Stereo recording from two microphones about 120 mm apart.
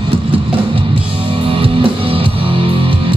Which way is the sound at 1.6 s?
50° right (ahead or behind).